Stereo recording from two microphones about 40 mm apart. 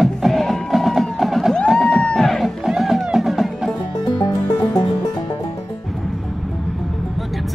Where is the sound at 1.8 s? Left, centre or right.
Centre.